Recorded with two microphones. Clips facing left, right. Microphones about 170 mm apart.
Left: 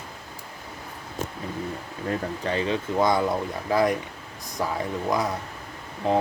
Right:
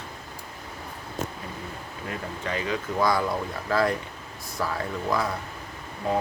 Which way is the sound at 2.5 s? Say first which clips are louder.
Left 3 dB; 30° left (ahead or behind).